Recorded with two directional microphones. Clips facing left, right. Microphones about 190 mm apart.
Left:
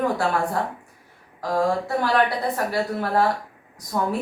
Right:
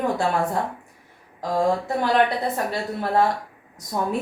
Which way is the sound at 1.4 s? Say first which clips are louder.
Even; 20° right (ahead or behind).